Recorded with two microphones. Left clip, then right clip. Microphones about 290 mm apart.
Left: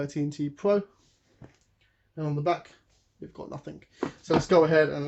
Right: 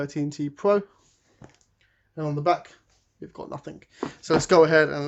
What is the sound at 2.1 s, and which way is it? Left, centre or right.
Speech, right.